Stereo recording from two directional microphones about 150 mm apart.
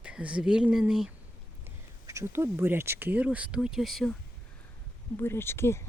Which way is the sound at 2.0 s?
20° right (ahead or behind).